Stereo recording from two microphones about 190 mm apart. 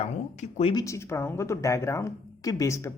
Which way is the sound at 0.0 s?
35° left (ahead or behind).